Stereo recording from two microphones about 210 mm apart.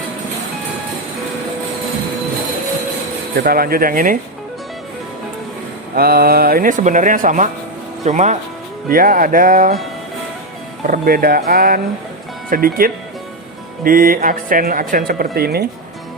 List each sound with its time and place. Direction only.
3.3 s speech: 45° right (ahead or behind)
5.9 s speech: 45° right (ahead or behind)
10.8 s speech: 40° right (ahead or behind)